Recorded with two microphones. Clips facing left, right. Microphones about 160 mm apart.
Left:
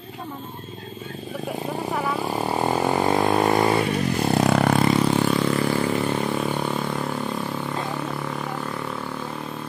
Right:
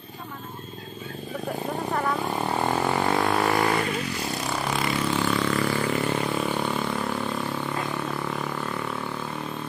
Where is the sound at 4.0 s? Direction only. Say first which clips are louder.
Left 9 dB; 50° left (ahead or behind).